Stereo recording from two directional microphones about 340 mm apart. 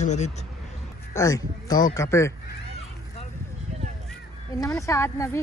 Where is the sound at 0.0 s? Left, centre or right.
Centre.